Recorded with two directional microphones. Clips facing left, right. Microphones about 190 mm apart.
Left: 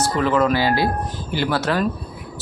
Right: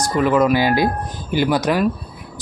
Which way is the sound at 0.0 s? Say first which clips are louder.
Right 2 dB; 15° right (ahead or behind).